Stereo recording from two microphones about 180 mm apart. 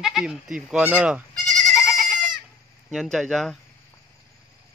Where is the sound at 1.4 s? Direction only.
5° left (ahead or behind).